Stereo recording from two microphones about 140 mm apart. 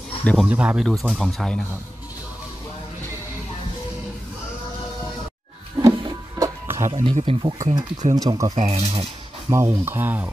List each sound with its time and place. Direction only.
0.2 s speech: 10° left (ahead or behind)
0.5 s speech: 10° right (ahead or behind)
5.8 s music: 25° right (ahead or behind)
6.9 s speech: 40° right (ahead or behind)
8.1 s speech: 30° right (ahead or behind)
8.5 s speech: 50° right (ahead or behind)
9.5 s speech: 20° right (ahead or behind)